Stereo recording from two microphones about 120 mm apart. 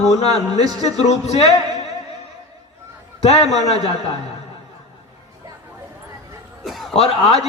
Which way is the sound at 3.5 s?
65° left (ahead or behind).